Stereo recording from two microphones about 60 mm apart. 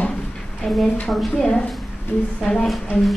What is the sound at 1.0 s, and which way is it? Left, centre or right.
A woman's voice, centre.